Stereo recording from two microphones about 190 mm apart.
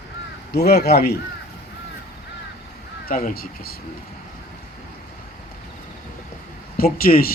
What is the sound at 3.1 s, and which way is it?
Speech, 50° left (ahead or behind).